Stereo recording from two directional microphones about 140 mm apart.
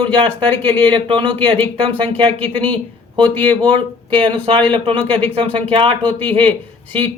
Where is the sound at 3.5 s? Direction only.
35° right (ahead or behind).